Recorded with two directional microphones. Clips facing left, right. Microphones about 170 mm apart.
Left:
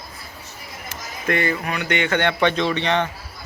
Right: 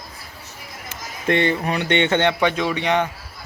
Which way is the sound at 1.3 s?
25° right (ahead or behind).